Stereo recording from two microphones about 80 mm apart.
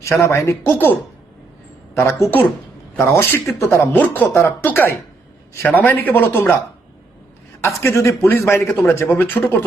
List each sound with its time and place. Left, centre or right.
0.0 s speech: left
2.0 s speech: left
3.9 s speech: left
4.3 s speech: left
4.6 s speech: left
7.6 s speech: left